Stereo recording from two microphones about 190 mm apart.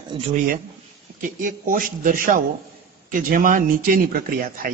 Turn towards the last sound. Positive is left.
turn(degrees=-50)  # may be behind; listen again after turning